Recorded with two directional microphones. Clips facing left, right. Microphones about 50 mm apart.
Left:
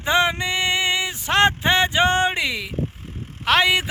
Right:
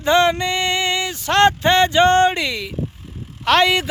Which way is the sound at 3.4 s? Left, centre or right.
Centre.